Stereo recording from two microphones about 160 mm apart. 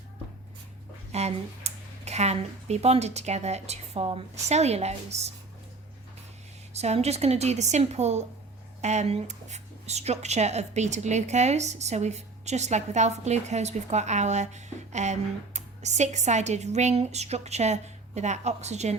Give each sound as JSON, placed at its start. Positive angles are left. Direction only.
{"t": 1.1, "sound": "speech", "side_deg": -40}
{"t": 6.7, "sound": "speech", "side_deg": -40}